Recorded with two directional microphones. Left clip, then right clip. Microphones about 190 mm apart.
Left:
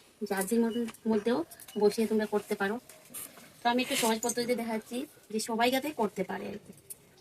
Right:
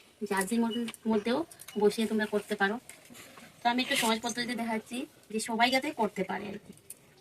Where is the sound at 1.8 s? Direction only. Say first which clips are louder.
Left 1 dB; 15° right (ahead or behind).